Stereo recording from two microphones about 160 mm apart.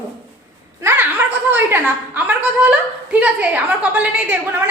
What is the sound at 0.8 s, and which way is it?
A woman's voice, 10° right (ahead or behind).